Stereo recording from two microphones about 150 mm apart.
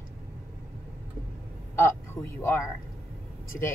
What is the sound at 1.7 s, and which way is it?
Speech, 15° left (ahead or behind).